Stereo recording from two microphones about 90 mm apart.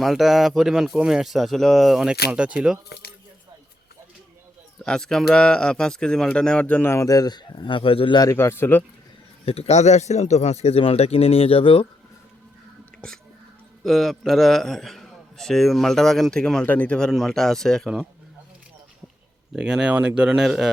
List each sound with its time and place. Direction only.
0.0 s a man's voice: centre (ahead or behind)
4.8 s speech: 5° left (ahead or behind)
6.8 s a man's voice: 35° left (ahead or behind); by 8.2 s 75° left (ahead or behind)
8.4 s speech: 30° left (ahead or behind)
9.5 s speech: 90° left
10.7 s speech: 90° left
13.8 s a man's voice: centre (ahead or behind)
17.1 s a man's voice: centre (ahead or behind)
19.5 s speech: 10° right (ahead or behind)